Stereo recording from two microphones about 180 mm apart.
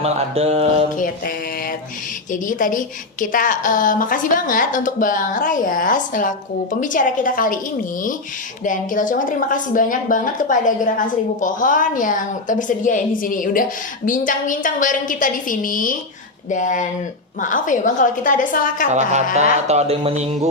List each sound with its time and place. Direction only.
0.0 s speech: 35° right (ahead or behind)
0.9 s a woman's voice: 50° left (ahead or behind)
2.3 s a woman's voice: 45° left (ahead or behind)
8.6 s a woman's voice: 45° left (ahead or behind)
18.9 s speech: 40° right (ahead or behind)